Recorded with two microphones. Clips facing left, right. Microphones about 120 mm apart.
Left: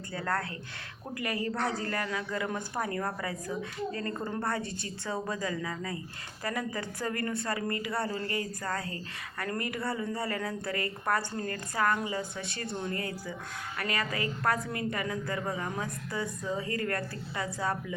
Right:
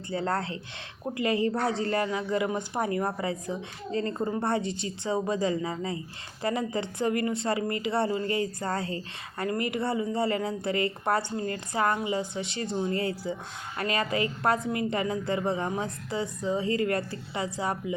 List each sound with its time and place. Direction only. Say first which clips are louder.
0.1 s a man's voice: right 4 dB; 25° right (ahead or behind)